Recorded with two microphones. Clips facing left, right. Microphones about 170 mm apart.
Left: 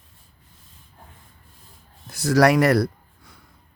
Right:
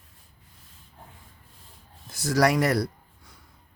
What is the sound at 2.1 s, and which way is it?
Speech, 65° left (ahead or behind).